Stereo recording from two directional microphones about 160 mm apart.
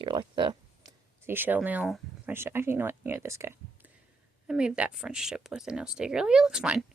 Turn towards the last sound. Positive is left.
turn(degrees=-5)  # may be behind; listen again after turning